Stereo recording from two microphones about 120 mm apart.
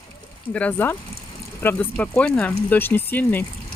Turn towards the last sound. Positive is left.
turn(degrees=15)  # may be behind; listen again after turning